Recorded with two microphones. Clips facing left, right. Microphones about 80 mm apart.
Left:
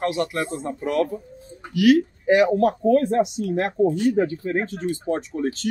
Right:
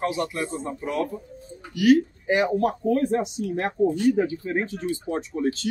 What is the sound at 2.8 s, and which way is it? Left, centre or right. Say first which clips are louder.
Speech: left 4 dB; left.